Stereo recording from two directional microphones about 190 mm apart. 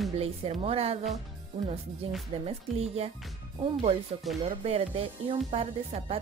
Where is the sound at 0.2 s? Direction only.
30° right (ahead or behind).